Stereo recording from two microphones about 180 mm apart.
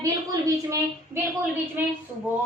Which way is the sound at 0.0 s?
20° right (ahead or behind).